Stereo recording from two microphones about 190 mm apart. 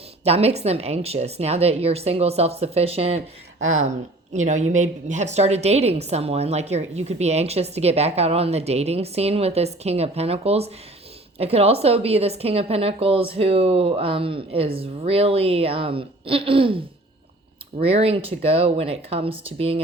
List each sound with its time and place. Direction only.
0.3 s a woman's voice: 35° right (ahead or behind)
3.6 s speech: 90° right
4.4 s a woman's voice: 40° right (ahead or behind)
17.8 s a woman's voice: 30° right (ahead or behind)